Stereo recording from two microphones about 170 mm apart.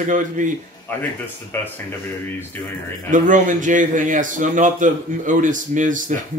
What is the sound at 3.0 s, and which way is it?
Speech, 50° right (ahead or behind).